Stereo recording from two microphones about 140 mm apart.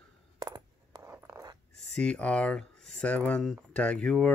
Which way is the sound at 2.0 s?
5° left (ahead or behind).